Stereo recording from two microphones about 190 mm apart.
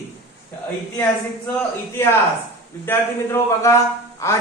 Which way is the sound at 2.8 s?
10° left (ahead or behind).